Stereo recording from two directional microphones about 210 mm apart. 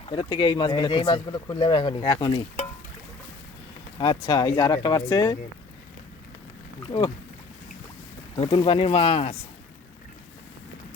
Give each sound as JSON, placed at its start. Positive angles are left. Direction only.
{"t": 0.1, "sound": "speech", "side_deg": 20}
{"t": 3.9, "sound": "speech", "side_deg": 20}
{"t": 6.8, "sound": "speech", "side_deg": 25}
{"t": 8.4, "sound": "speech", "side_deg": 25}